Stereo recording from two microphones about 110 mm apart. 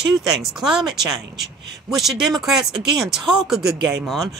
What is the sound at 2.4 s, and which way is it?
Speech, 5° right (ahead or behind).